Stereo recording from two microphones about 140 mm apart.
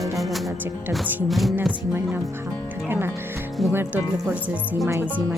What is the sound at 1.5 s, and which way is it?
Speech, 10° right (ahead or behind).